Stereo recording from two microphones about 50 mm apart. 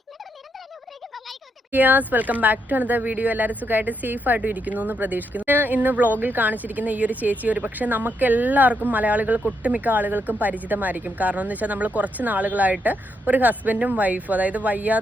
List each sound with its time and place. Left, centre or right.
1.7 s speech: right